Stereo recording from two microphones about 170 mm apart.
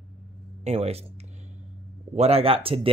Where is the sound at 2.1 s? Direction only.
35° right (ahead or behind).